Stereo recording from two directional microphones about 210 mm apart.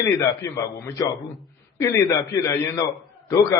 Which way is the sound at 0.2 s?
15° left (ahead or behind).